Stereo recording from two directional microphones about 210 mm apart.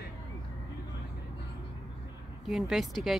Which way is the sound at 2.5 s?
Centre (ahead or behind).